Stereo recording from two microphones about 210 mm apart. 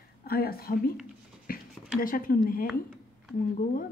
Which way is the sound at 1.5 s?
45° left (ahead or behind).